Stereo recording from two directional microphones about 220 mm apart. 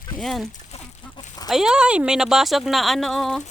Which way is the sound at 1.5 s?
Centre (ahead or behind).